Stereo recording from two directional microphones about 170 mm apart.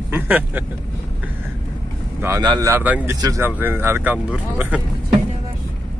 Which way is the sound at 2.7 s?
10° right (ahead or behind).